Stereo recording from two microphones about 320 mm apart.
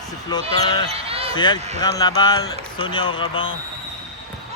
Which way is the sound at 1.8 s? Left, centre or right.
Centre.